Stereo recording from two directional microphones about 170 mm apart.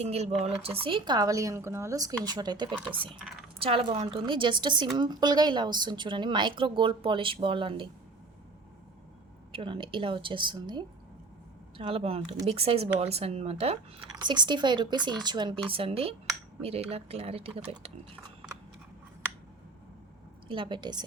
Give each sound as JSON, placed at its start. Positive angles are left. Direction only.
{"t": 0.0, "sound": "a woman's voice", "side_deg": -40}
{"t": 2.7, "sound": "speech", "side_deg": -10}
{"t": 3.6, "sound": "a woman's voice", "side_deg": -30}
{"t": 9.5, "sound": "a woman's voice", "side_deg": -30}
{"t": 14.2, "sound": "a woman's voice", "side_deg": -25}
{"t": 20.5, "sound": "a woman's voice", "side_deg": -30}